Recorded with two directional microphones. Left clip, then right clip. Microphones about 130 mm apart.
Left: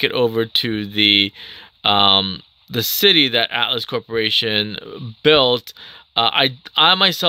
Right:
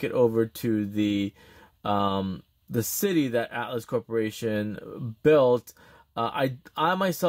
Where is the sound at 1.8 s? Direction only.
Centre (ahead or behind).